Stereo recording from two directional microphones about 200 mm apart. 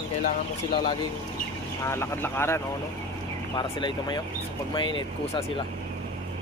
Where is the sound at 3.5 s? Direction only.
20° left (ahead or behind).